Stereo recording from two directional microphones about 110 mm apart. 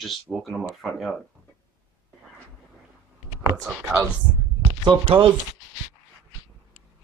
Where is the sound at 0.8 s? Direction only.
Centre (ahead or behind).